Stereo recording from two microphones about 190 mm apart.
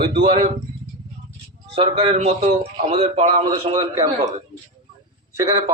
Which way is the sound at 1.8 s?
30° right (ahead or behind).